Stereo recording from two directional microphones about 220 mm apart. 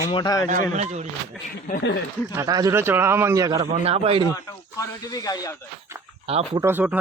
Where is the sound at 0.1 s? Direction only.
20° left (ahead or behind).